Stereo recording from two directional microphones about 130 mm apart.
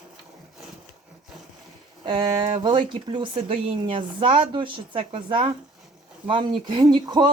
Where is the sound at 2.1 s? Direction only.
35° right (ahead or behind).